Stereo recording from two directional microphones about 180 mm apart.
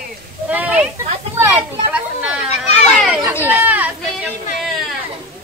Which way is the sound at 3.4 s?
10° right (ahead or behind).